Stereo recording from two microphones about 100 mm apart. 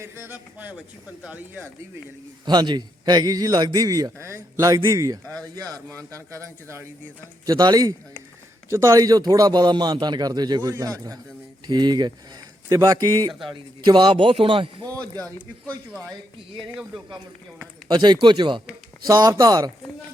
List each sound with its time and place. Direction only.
0.0 s a man's voice: 25° right (ahead or behind)
1.3 s speech: 15° right (ahead or behind)
2.4 s a man's voice: 45° right (ahead or behind); by 6.8 s 30° right (ahead or behind)
7.4 s speech: 45° right (ahead or behind)
8.7 s a man's voice: 30° right (ahead or behind)
13.5 s a man's voice: 50° right (ahead or behind)
17.8 s speech: 45° right (ahead or behind)
19.0 s a man's voice: 40° right (ahead or behind)